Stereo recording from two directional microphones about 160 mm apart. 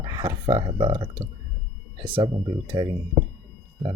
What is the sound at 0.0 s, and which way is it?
Speech, 25° right (ahead or behind).